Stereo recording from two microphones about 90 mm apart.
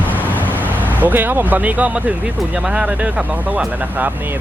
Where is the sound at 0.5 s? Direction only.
20° right (ahead or behind).